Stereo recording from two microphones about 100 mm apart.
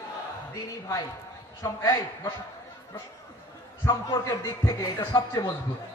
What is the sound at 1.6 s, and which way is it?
Speech, 35° left (ahead or behind).